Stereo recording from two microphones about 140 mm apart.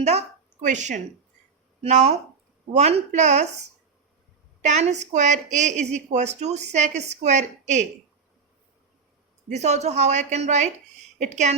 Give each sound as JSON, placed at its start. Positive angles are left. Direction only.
{"t": 0.0, "sound": "a woman's voice", "side_deg": -55}
{"t": 1.8, "sound": "a woman's voice", "side_deg": -50}
{"t": 4.6, "sound": "a woman's voice", "side_deg": -55}
{"t": 9.5, "sound": "a woman's voice", "side_deg": -55}